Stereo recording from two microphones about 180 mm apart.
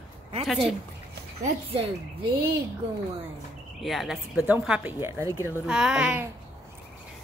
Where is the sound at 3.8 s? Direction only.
Centre (ahead or behind).